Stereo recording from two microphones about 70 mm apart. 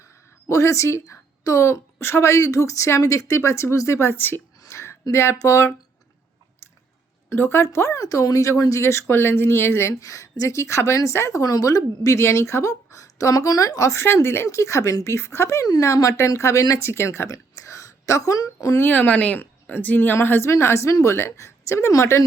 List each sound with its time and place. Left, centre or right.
0.0 s a woman's voice: left
4.7 s a sound: left
5.1 s speech: left
7.3 s speech: left
8.0 s speech: left
8.8 s speech: left
9.9 s a woman's voice: left
11.4 s a woman's voice: left
14.4 s a woman's voice: left
16.9 s a woman's voice: left
18.8 s a woman's voice: left